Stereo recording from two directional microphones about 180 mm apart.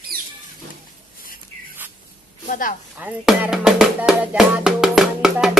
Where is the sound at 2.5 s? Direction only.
50° left (ahead or behind).